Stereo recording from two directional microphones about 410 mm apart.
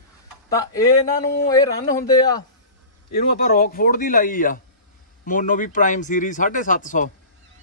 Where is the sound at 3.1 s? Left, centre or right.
Left.